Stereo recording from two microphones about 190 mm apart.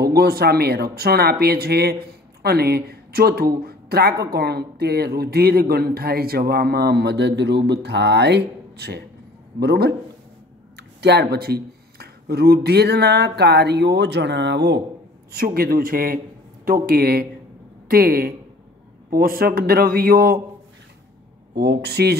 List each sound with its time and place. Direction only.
0.0 s speech: 55° right (ahead or behind)
15.3 s a man's voice: 50° right (ahead or behind)
21.5 s speech: 60° right (ahead or behind)